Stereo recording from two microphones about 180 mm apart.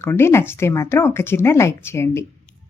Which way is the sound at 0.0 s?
15° left (ahead or behind).